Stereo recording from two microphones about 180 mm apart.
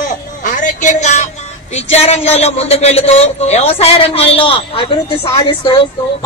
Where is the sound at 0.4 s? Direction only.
45° left (ahead or behind); by 4.8 s 30° left (ahead or behind).